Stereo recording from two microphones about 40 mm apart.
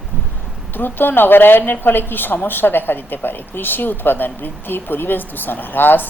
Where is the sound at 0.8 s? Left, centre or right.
Left.